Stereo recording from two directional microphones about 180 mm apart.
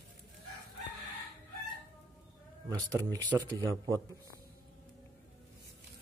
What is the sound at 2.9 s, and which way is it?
Speech, 20° right (ahead or behind).